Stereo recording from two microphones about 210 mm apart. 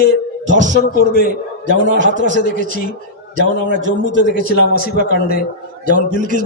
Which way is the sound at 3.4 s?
60° right (ahead or behind).